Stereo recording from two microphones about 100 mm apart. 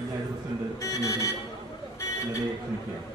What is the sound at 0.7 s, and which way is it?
Speech, 35° left (ahead or behind).